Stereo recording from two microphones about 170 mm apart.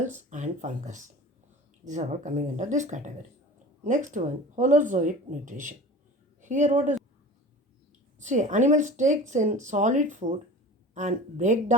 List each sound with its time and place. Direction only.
0.3 s speech: 45° right (ahead or behind)
8.2 s speech: 45° right (ahead or behind)